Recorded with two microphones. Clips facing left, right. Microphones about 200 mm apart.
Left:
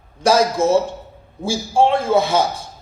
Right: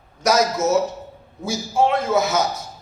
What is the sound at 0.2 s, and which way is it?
A man's voice, 30° left (ahead or behind).